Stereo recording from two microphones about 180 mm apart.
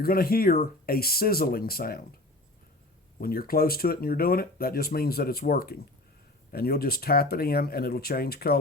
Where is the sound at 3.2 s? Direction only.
55° left (ahead or behind).